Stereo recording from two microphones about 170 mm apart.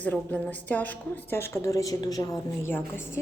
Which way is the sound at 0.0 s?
10° left (ahead or behind).